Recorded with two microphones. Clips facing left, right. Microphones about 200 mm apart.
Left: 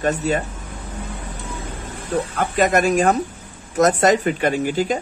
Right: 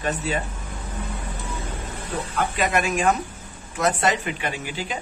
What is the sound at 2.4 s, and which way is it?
Speech, 45° left (ahead or behind).